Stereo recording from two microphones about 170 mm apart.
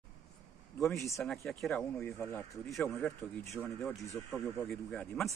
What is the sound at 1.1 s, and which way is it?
Speech, centre (ahead or behind).